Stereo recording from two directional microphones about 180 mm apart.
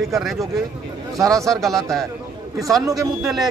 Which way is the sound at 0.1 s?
Centre (ahead or behind).